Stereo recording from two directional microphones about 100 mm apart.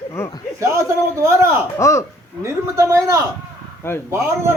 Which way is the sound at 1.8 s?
30° left (ahead or behind).